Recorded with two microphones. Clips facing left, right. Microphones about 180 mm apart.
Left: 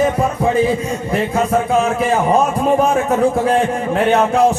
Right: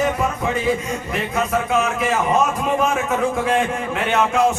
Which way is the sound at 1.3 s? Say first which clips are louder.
Left 3 dB; 30° left (ahead or behind).